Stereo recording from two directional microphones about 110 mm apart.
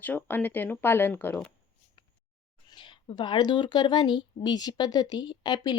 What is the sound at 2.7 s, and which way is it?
Speech, 45° left (ahead or behind).